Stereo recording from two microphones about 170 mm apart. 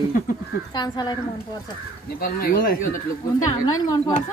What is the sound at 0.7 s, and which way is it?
Speech, 25° left (ahead or behind).